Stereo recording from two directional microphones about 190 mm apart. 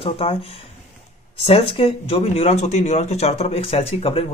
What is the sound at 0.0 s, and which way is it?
Speech, 30° left (ahead or behind).